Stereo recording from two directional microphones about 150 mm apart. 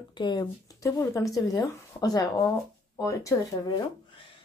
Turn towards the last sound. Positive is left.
turn(degrees=25)  # may be behind; listen again after turning